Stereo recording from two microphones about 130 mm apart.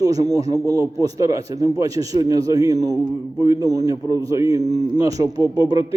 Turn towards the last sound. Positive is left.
turn(degrees=-30)  # may be behind; listen again after turning